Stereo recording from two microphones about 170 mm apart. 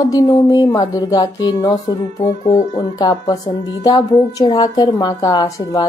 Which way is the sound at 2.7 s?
25° left (ahead or behind).